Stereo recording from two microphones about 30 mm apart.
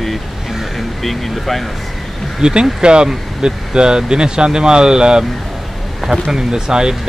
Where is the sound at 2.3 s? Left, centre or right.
Right.